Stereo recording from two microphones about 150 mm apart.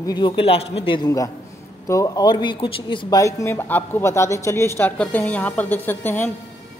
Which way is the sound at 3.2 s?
20° left (ahead or behind).